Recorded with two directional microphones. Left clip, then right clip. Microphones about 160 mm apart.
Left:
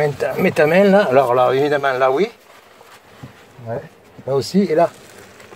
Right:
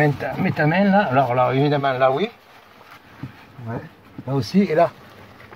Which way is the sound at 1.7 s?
35° left (ahead or behind).